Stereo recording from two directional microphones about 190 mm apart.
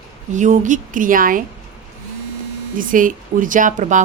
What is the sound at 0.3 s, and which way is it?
Speech, 40° right (ahead or behind).